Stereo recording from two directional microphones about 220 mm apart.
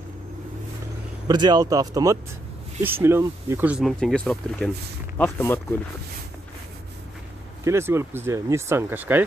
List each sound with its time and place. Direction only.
1.2 s speech: 20° right (ahead or behind); by 5.8 s 10° left (ahead or behind)
7.6 s speech: 10° right (ahead or behind)